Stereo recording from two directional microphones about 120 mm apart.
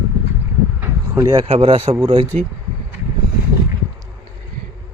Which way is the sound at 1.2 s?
40° right (ahead or behind).